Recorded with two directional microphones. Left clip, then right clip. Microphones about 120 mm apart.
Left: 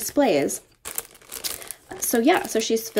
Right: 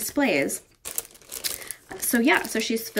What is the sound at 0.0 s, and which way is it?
Speech, 25° left (ahead or behind).